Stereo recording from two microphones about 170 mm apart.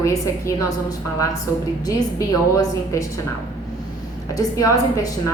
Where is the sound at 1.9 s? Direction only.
20° left (ahead or behind).